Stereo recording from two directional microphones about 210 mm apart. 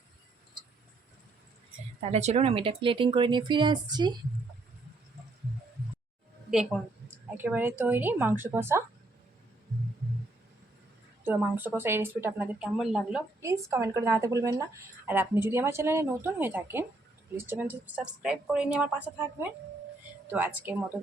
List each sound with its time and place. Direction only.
2.0 s speech: 30° right (ahead or behind)
7.3 s speech: 10° right (ahead or behind)
11.2 s speech: 10° right (ahead or behind)
13.4 s speech: 15° right (ahead or behind)